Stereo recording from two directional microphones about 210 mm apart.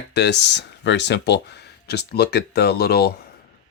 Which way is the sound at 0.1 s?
55° left (ahead or behind).